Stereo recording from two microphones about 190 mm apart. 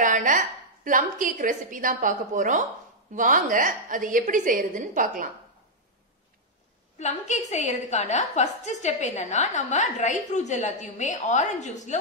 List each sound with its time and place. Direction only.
0.0 s a woman's voice: 45° right (ahead or behind)
7.0 s a woman's voice: 40° left (ahead or behind)